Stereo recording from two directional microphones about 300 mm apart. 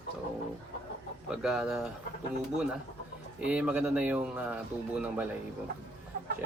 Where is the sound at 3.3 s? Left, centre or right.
Centre.